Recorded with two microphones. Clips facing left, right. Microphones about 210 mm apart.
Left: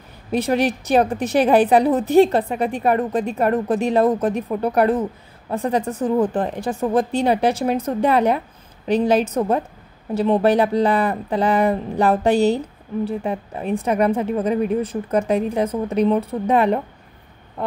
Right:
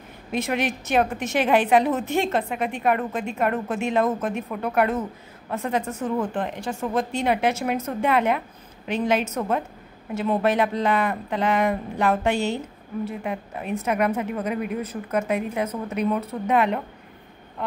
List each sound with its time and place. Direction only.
0.3 s speech: 35° left (ahead or behind)